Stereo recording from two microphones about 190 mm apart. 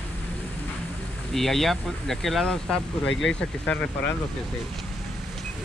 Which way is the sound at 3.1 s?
80° left.